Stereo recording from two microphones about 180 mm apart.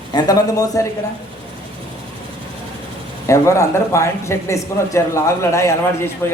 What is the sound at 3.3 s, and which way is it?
A man's voice, 15° left (ahead or behind).